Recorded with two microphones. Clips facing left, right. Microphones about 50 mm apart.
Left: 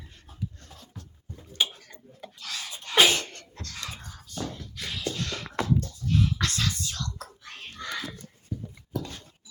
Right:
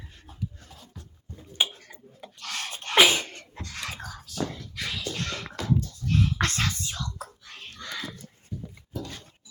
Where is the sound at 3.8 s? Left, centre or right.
Right.